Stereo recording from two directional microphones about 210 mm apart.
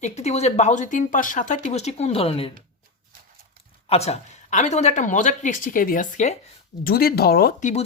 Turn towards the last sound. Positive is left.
turn(degrees=35)  # may be behind; listen again after turning